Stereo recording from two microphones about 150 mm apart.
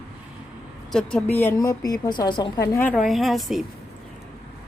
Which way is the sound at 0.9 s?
10° left (ahead or behind).